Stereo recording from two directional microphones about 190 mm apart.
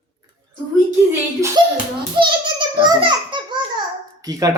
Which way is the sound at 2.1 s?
25° right (ahead or behind).